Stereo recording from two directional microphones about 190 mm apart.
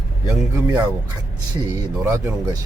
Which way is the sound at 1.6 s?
20° right (ahead or behind).